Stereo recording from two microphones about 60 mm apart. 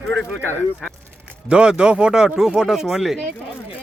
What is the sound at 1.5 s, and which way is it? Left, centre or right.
Speech, centre.